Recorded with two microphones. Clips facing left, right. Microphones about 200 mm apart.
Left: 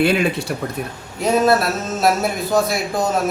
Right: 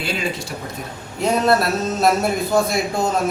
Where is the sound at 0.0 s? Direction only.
60° left (ahead or behind).